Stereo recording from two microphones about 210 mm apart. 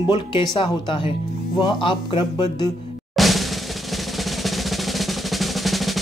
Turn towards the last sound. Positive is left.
turn(degrees=0)  # may be behind; listen again after turning